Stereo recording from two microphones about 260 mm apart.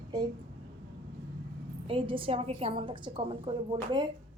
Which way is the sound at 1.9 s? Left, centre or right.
Centre.